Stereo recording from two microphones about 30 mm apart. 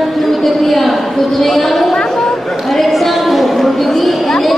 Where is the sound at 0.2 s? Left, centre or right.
Centre.